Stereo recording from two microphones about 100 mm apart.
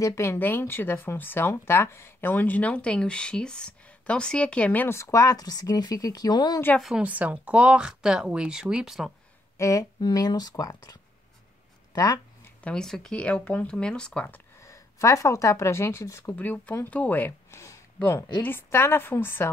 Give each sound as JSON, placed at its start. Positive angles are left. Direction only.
{"t": 0.0, "sound": "speech", "side_deg": 25}
{"t": 4.8, "sound": "speech", "side_deg": 25}
{"t": 7.0, "sound": "speech", "side_deg": -15}
{"t": 9.6, "sound": "speech", "side_deg": 30}
{"t": 9.9, "sound": "speech", "side_deg": 45}
{"t": 12.6, "sound": "speech", "side_deg": 5}
{"t": 14.2, "sound": "a sound", "side_deg": 20}
{"t": 14.7, "sound": "speech", "side_deg": 30}